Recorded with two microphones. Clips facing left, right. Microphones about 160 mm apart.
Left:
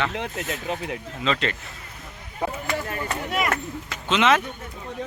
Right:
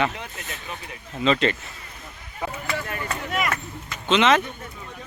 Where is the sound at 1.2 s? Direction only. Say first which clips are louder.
Right 5 dB; centre (ahead or behind).